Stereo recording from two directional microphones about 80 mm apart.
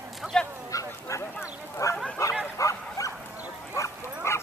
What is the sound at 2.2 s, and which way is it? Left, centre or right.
Bow-wow, left.